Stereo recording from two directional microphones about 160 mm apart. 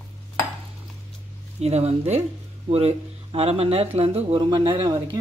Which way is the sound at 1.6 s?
40° right (ahead or behind).